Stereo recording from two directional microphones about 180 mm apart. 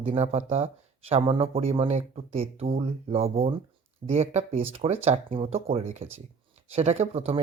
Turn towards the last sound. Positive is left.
turn(degrees=-35)  # may be behind; listen again after turning